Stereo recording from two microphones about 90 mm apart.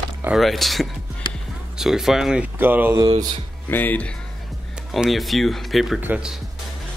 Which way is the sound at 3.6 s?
20° left (ahead or behind).